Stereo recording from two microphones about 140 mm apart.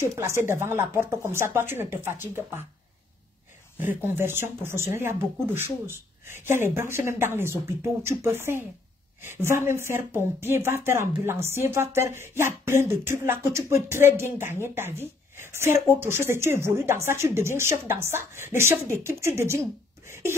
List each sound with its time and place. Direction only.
0.0 s speech: 20° right (ahead or behind)
3.9 s speech: 15° right (ahead or behind)